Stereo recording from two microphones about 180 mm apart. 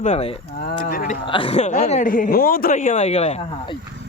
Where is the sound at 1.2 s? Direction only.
30° left (ahead or behind).